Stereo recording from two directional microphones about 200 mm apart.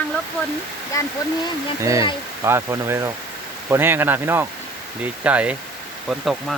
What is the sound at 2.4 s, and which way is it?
Speech, 15° right (ahead or behind).